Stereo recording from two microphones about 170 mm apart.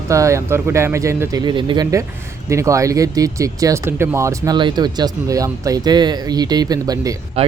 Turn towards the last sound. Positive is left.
turn(degrees=-20)  # may be behind; listen again after turning